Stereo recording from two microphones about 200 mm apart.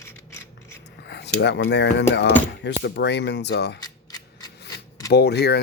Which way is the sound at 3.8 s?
20° left (ahead or behind).